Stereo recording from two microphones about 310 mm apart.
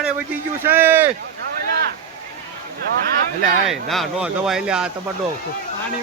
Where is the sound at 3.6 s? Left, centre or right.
Centre.